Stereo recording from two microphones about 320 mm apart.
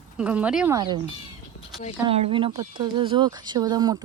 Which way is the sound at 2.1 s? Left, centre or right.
Centre.